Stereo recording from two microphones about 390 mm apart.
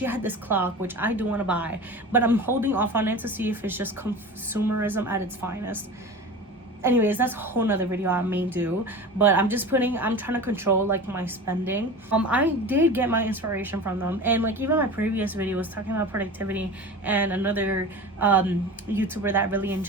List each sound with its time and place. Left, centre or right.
0.0 s a woman's voice: centre
6.8 s a woman's voice: centre